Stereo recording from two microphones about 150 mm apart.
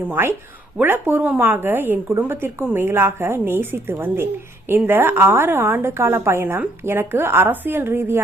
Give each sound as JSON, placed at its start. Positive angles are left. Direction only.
{"t": 0.0, "sound": "speech", "side_deg": -15}